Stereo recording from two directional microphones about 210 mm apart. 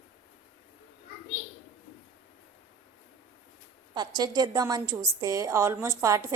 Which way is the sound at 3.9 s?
20° right (ahead or behind).